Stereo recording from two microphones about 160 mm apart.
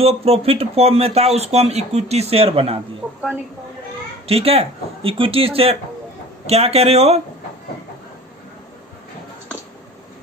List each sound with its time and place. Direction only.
0.0 s speech: 40° right (ahead or behind)
4.3 s speech: 40° right (ahead or behind)